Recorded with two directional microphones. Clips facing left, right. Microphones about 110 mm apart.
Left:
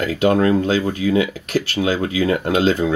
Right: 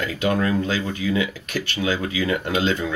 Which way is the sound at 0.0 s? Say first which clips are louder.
Left 6 dB; 35° left (ahead or behind).